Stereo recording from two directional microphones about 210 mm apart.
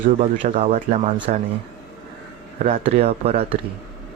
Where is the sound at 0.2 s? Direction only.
35° right (ahead or behind).